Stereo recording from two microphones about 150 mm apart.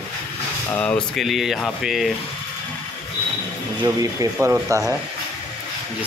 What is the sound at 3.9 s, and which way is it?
Speech, 20° right (ahead or behind).